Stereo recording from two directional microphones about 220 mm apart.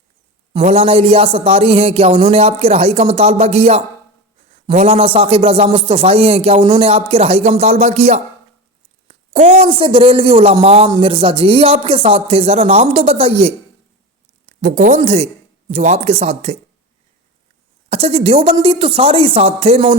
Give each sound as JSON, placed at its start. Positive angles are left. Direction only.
{"t": 0.6, "sound": "a man's voice", "side_deg": -25}
{"t": 14.6, "sound": "a man's voice", "side_deg": -35}
{"t": 17.8, "sound": "a man's voice", "side_deg": -25}